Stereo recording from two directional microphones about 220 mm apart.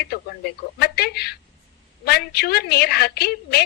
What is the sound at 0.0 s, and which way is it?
A woman's voice, 45° left (ahead or behind).